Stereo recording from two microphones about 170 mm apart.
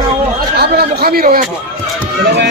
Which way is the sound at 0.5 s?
70° right (ahead or behind).